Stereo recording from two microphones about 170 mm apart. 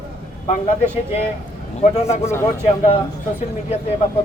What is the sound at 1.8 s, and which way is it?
Speech, 40° left (ahead or behind).